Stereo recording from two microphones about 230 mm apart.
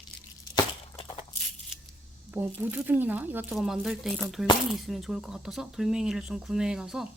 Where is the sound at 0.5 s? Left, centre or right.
Left.